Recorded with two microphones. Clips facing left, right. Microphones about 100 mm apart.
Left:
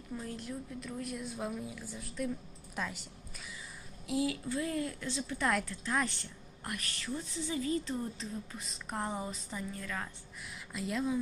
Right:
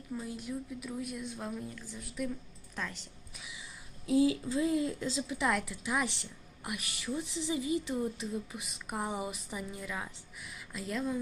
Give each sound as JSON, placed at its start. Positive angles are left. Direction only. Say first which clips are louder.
{"t": 0.2, "sound": "a woman's voice", "louder": "right 2 dB", "side_deg": -5}
{"t": 4.0, "sound": "speech", "louder": "right 6 dB", "side_deg": -30}
{"t": 5.4, "sound": "a woman's voice", "louder": "even", "side_deg": 0}